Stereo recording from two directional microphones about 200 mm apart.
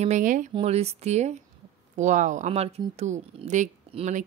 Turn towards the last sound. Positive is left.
turn(degrees=-35)  # may be behind; listen again after turning